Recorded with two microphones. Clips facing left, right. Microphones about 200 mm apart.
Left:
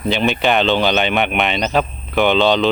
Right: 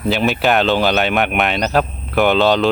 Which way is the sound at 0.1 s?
Centre (ahead or behind).